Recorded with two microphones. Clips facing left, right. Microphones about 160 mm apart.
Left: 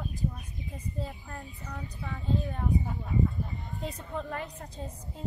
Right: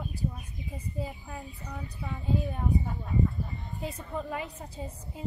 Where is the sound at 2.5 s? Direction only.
Centre (ahead or behind).